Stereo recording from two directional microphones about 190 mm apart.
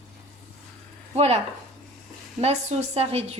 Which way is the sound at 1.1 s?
35° right (ahead or behind).